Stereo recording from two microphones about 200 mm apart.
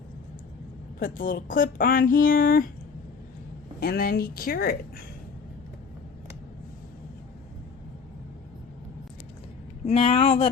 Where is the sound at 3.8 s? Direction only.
50° left (ahead or behind).